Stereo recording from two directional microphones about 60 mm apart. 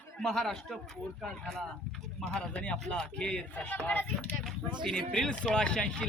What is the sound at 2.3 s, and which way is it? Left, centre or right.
A man's voice, centre.